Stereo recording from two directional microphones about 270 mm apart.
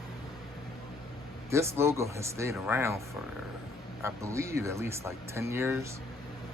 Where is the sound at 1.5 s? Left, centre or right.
Centre.